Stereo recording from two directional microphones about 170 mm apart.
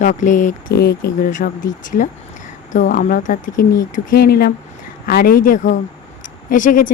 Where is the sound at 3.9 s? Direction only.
65° left (ahead or behind).